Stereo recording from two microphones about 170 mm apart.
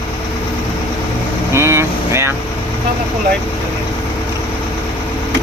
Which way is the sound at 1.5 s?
15° right (ahead or behind).